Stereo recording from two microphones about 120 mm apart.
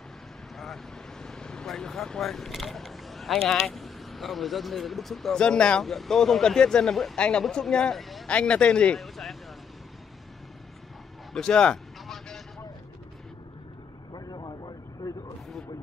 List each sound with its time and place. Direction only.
1.2 s speech: 5° left (ahead or behind)
11.3 s a sound: 5° left (ahead or behind)
14.1 s vehicle: 35° left (ahead or behind)